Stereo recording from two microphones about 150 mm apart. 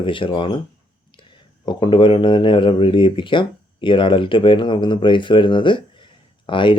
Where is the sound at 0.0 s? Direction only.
35° left (ahead or behind).